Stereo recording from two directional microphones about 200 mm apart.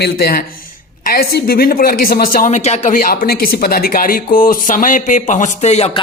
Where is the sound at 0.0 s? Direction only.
50° left (ahead or behind).